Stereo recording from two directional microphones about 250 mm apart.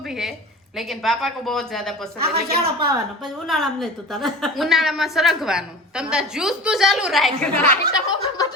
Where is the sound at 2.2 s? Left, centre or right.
Right.